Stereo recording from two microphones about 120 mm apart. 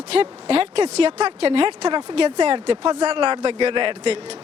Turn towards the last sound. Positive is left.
turn(degrees=-50)  # may be behind; listen again after turning